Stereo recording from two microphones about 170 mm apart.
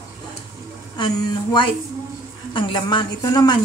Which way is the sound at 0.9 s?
25° left (ahead or behind).